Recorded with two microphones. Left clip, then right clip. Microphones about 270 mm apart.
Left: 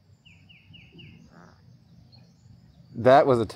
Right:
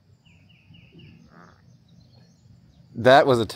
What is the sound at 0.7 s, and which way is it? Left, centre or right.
Bird, centre.